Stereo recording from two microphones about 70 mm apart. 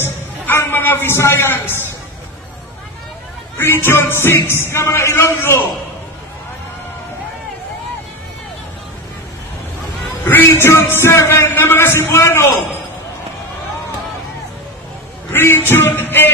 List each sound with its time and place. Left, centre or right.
0.0 s a man's voice: left
3.5 s a man's voice: left
10.2 s music: left
10.6 s a man's voice: left
15.3 s music: left